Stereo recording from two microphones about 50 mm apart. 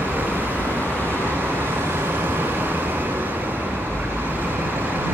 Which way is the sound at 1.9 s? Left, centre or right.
Right.